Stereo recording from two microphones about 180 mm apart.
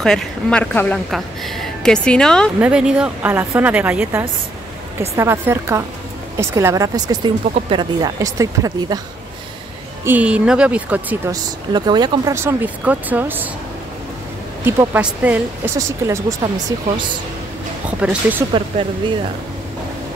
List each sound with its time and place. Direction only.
0.0 s a woman's voice: 5° left (ahead or behind)
2.6 s speech: 5° right (ahead or behind)
10.0 s speech: 5° right (ahead or behind)
11.7 s speech: 25° right (ahead or behind)
14.6 s speech: 10° right (ahead or behind)
17.8 s speech: 10° right (ahead or behind)
18.7 s speech: 45° right (ahead or behind)